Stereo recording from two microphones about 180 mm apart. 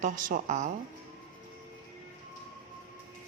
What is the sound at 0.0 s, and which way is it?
Speech, 50° right (ahead or behind).